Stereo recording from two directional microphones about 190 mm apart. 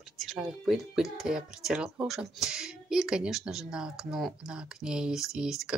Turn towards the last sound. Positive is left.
turn(degrees=-5)  # may be behind; listen again after turning